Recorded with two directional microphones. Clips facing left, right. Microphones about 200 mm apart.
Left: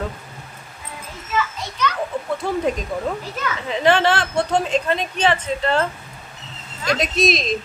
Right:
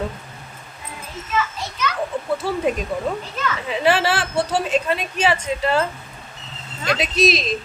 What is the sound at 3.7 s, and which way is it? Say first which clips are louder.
Speech: left 2 dB; 5° right (ahead or behind).